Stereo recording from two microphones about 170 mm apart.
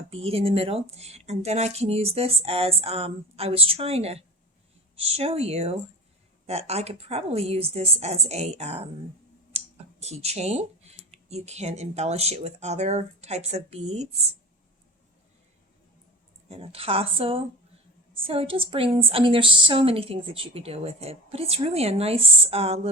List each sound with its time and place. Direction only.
0.1 s a woman's voice: 35° right (ahead or behind)
16.5 s a woman's voice: 35° right (ahead or behind)